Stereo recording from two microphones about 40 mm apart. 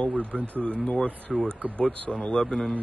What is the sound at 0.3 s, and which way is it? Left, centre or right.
Speech, right.